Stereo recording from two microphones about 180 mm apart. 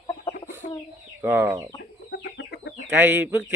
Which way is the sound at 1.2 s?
10° right (ahead or behind).